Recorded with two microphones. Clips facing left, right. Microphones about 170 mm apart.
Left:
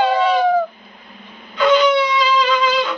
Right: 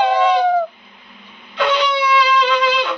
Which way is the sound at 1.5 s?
70° right (ahead or behind).